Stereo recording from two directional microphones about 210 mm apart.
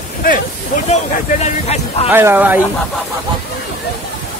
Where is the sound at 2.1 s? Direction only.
10° right (ahead or behind).